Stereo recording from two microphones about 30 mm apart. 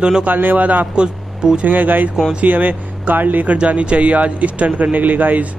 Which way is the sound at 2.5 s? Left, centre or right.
Right.